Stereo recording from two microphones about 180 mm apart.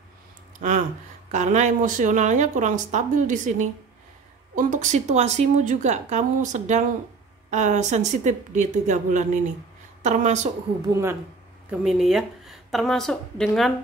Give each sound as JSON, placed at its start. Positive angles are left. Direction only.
{"t": 0.6, "sound": "a woman's voice", "side_deg": -45}
{"t": 10.9, "sound": "a woman's voice", "side_deg": -15}
{"t": 11.8, "sound": "speech", "side_deg": 0}